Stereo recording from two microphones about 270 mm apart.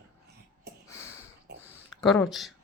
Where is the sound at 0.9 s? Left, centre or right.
Centre.